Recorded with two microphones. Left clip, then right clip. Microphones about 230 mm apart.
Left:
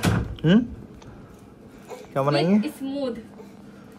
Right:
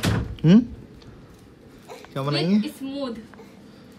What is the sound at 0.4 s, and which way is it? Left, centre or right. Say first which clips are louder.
Speech: right 2 dB; right.